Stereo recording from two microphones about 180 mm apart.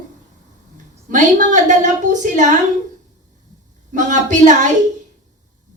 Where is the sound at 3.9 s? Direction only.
45° right (ahead or behind).